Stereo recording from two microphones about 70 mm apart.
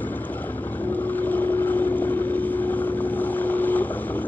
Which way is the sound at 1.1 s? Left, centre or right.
Left.